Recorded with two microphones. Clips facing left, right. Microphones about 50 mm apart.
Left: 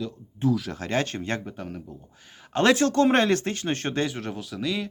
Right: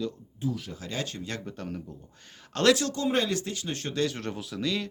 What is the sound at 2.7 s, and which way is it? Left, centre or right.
Speech, left.